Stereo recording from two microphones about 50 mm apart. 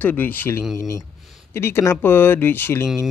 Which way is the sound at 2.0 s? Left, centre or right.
Left.